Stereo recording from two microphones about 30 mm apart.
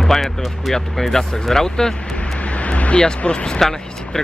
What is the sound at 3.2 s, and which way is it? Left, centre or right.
Speech, left.